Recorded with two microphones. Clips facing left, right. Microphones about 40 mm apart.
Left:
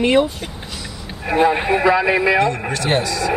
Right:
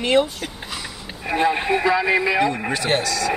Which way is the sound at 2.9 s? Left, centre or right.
Centre.